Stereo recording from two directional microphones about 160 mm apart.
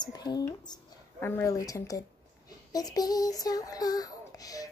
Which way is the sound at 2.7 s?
25° left (ahead or behind).